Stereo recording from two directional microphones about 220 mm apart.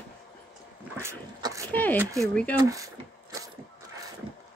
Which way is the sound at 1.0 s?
15° right (ahead or behind).